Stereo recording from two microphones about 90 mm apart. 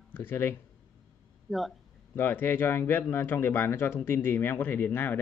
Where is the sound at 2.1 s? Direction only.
25° left (ahead or behind).